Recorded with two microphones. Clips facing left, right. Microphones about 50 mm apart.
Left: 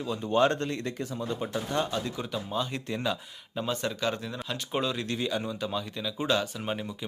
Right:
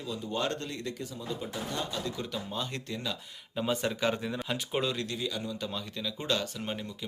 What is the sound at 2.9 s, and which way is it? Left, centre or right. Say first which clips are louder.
Speech: left 6 dB; left.